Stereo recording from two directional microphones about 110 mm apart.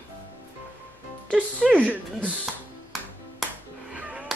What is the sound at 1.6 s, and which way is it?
Speech, centre (ahead or behind).